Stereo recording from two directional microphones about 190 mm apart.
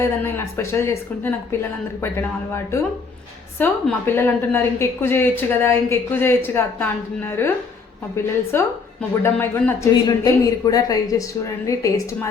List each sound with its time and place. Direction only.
0.0 s a woman's voice: 15° left (ahead or behind)
8.5 s a woman's voice: 10° left (ahead or behind)